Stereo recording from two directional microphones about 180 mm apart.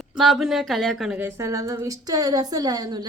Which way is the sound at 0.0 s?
Centre (ahead or behind).